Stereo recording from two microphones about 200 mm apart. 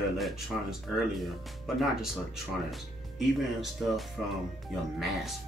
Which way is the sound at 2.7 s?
Centre (ahead or behind).